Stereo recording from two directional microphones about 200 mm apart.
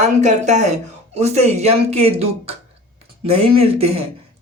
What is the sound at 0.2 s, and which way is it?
Speech, 35° right (ahead or behind).